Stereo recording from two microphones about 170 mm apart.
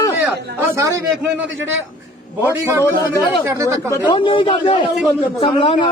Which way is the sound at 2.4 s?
15° right (ahead or behind).